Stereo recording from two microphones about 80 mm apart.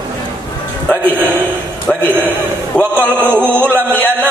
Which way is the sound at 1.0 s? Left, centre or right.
Right.